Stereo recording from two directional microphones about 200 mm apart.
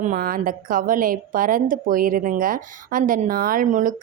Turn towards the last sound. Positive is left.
turn(degrees=-40)  # may be behind; listen again after turning